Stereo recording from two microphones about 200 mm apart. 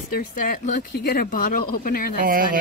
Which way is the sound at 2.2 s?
45° right (ahead or behind).